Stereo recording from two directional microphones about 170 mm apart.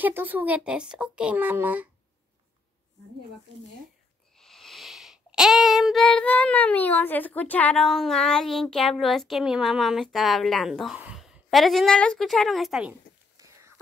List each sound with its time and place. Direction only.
0.0 s a child's voice: 10° right (ahead or behind)
4.4 s child singing: centre (ahead or behind)
13.4 s a sound: 20° right (ahead or behind)